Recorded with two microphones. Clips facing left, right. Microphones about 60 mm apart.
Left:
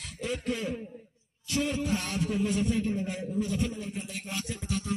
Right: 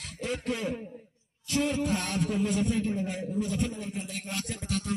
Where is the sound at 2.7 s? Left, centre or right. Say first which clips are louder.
Even; right.